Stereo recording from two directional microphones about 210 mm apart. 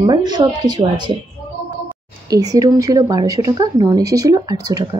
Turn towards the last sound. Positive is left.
turn(degrees=-20)  # may be behind; listen again after turning